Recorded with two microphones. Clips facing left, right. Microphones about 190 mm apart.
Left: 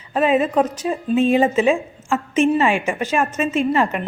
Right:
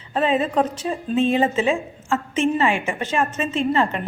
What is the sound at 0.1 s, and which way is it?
A woman's voice, 10° left (ahead or behind).